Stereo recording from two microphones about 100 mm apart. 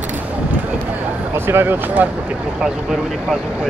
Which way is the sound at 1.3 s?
20° right (ahead or behind).